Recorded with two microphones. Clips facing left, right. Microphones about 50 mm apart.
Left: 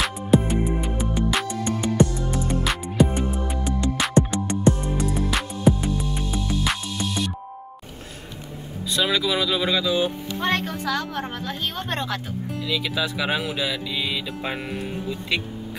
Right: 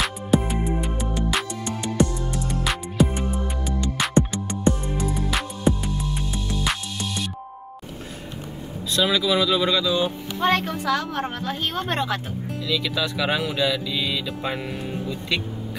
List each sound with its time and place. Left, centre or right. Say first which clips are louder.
0.0 s music: left 2 dB; centre
8.9 s speech: right 2 dB; centre
10.4 s a woman's voice: right 3 dB; centre
12.6 s speech: right 1 dB; centre